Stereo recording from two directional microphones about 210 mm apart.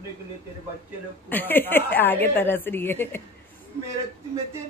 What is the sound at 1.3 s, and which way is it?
A woman's voice, 10° left (ahead or behind).